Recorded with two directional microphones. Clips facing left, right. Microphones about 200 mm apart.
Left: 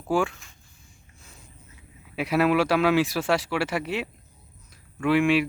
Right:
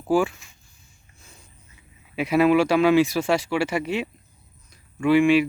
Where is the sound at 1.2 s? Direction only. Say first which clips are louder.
Even; centre (ahead or behind).